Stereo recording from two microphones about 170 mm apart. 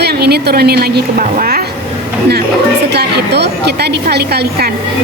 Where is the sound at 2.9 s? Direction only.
75° right (ahead or behind).